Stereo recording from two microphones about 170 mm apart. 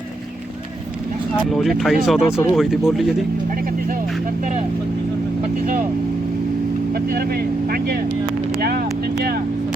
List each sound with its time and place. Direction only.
1.5 s speech: centre (ahead or behind)
6.9 s speech: 60° right (ahead or behind)